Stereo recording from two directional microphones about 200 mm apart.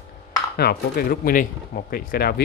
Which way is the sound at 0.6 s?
50° left (ahead or behind).